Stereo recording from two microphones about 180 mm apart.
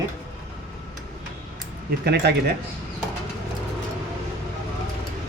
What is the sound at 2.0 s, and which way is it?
Speech, 65° right (ahead or behind).